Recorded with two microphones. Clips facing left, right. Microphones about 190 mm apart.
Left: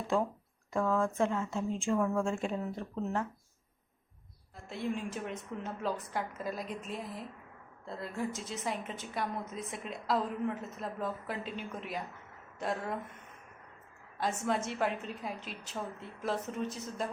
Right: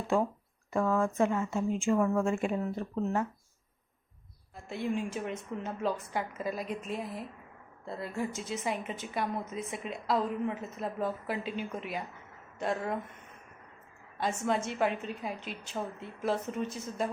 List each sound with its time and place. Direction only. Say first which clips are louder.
0.7 s a woman's voice: right 2 dB; 5° right (ahead or behind)
4.7 s a woman's voice: right 3 dB; centre (ahead or behind)
14.2 s a woman's voice: right 2 dB; centre (ahead or behind)